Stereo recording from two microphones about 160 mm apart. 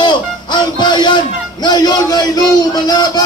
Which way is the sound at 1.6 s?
25° left (ahead or behind).